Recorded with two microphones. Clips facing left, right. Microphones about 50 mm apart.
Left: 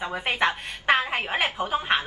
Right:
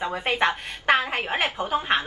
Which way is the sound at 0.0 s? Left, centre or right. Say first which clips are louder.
Right 1 dB; centre.